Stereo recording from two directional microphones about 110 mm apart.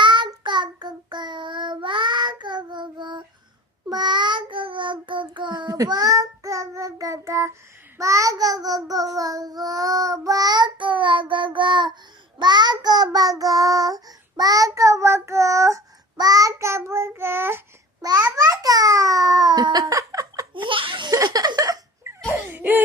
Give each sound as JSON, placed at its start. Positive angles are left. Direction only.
{"t": 0.0, "sound": "child singing", "side_deg": -45}
{"t": 18.0, "sound": "babbling", "side_deg": -35}
{"t": 20.5, "sound": "laughter", "side_deg": -50}
{"t": 21.1, "sound": "a sound", "side_deg": -35}
{"t": 22.5, "sound": "laughter", "side_deg": -15}